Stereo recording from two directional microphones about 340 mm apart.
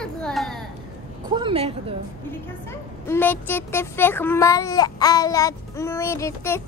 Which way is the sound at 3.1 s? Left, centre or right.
Centre.